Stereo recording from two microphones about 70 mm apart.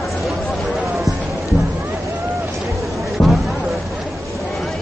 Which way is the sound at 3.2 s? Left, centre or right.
Left.